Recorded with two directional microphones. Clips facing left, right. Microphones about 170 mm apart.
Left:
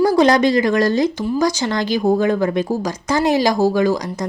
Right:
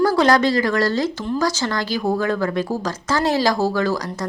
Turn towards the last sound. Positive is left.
turn(degrees=15)  # may be behind; listen again after turning